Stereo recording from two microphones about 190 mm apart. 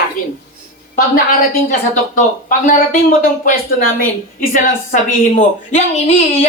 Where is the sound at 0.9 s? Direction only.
50° left (ahead or behind).